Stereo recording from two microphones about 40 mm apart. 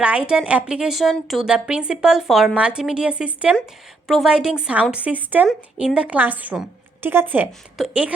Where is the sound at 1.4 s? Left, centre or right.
Right.